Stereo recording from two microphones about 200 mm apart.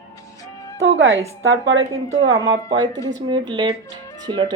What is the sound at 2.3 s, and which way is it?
Speech, 20° right (ahead or behind).